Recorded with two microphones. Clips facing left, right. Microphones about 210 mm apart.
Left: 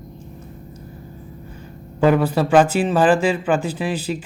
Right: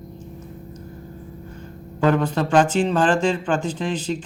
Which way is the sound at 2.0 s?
10° left (ahead or behind).